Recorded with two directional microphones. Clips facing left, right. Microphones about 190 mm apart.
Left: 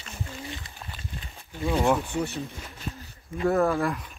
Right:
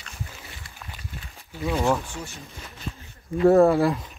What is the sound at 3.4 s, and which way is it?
Speech, 30° right (ahead or behind).